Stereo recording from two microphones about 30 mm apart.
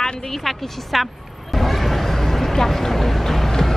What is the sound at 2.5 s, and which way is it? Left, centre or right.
Boat, centre.